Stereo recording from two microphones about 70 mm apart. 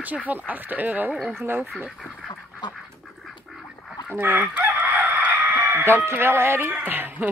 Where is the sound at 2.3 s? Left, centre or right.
Left.